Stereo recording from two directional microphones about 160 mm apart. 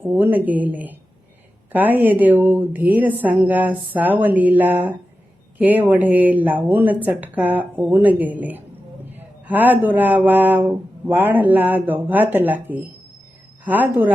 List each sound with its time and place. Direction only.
0.0 s speech: 10° right (ahead or behind)